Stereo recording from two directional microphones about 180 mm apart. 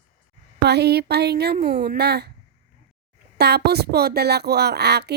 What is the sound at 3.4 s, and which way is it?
Speech, 65° right (ahead or behind).